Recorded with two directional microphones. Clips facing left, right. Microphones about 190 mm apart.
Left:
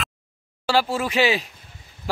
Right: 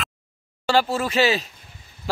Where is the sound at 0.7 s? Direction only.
10° left (ahead or behind).